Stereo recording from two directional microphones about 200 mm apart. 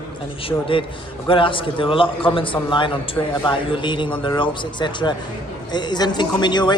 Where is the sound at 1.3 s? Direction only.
25° left (ahead or behind).